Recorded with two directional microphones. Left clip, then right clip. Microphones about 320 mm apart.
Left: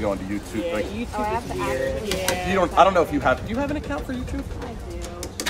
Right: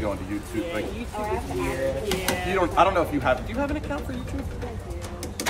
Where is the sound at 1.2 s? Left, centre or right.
Centre.